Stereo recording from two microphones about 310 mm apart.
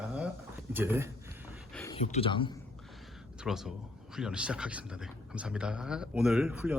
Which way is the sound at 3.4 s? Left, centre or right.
Centre.